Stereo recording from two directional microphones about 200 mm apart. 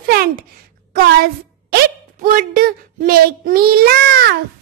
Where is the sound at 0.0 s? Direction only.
50° right (ahead or behind).